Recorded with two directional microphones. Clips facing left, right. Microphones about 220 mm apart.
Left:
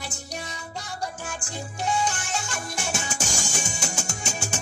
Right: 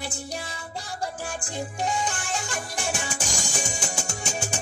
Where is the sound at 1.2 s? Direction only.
35° right (ahead or behind).